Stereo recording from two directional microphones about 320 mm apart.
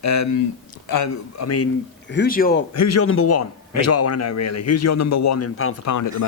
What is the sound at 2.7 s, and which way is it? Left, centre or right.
A man's voice, left.